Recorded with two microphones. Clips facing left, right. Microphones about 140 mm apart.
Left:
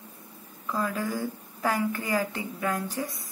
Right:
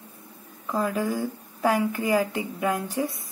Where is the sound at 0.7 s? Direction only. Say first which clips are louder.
Right 4 dB; 15° right (ahead or behind).